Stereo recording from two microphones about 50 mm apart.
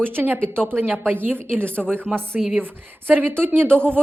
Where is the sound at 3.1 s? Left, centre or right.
Right.